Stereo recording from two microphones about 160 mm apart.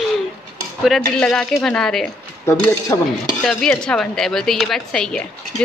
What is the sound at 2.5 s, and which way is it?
Speech, 20° left (ahead or behind).